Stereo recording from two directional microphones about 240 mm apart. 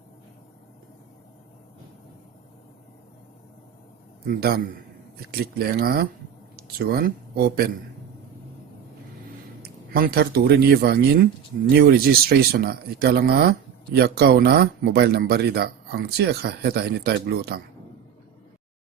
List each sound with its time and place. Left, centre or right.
4.4 s speech: right
9.6 s speech: right